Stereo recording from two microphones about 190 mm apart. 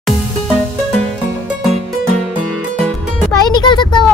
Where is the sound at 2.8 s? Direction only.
5° left (ahead or behind).